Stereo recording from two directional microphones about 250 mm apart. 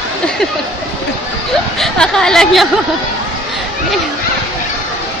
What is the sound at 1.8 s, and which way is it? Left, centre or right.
Speech, centre.